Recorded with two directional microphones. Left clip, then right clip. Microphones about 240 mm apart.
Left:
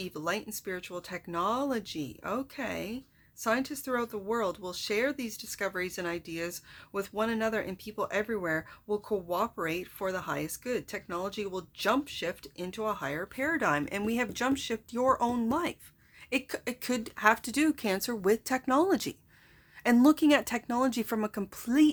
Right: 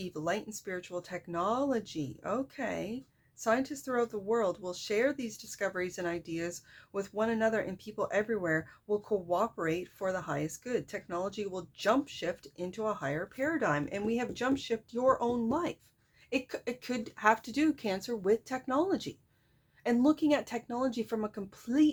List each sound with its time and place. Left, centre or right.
0.0 s speech: centre